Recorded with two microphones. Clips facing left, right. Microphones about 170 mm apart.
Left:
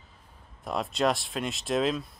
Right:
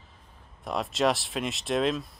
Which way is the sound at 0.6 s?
Centre (ahead or behind).